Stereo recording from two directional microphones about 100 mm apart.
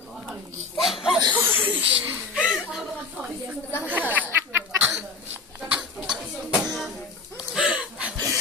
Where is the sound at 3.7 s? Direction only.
15° right (ahead or behind).